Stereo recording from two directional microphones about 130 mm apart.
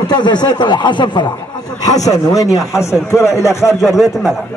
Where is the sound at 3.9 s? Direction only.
5° right (ahead or behind).